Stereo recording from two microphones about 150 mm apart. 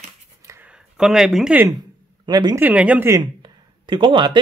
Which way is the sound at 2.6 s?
10° right (ahead or behind).